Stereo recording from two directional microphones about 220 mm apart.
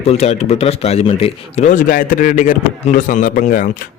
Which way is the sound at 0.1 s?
30° left (ahead or behind).